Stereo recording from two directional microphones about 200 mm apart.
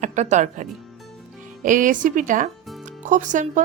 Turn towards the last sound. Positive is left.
turn(degrees=-40)  # may be behind; listen again after turning